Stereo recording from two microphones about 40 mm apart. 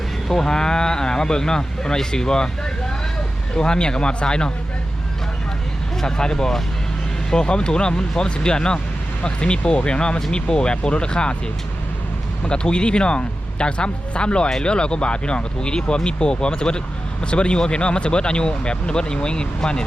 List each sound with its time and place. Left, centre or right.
0.3 s speech: centre
3.5 s speech: left
6.0 s speech: centre
12.5 s speech: left